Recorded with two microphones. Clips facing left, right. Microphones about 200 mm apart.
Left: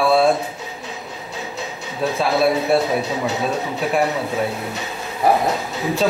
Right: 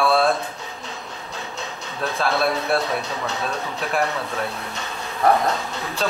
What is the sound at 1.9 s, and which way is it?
Speech, 5° left (ahead or behind).